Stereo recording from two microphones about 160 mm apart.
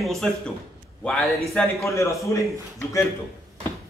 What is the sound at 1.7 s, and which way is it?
A man's voice, 20° left (ahead or behind).